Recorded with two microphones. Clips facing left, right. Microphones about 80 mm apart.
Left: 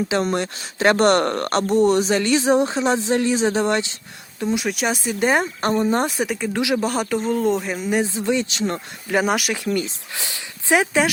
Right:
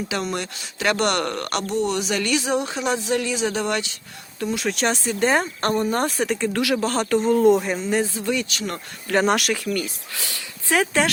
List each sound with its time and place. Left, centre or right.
0.1 s speech: left
4.4 s speech: centre
7.8 s speech: centre
9.0 s speech: centre
9.6 s speech: left